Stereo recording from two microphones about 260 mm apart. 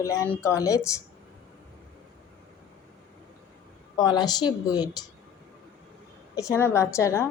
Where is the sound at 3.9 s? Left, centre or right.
Centre.